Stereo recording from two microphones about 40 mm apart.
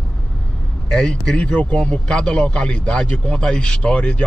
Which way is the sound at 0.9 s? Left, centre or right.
Centre.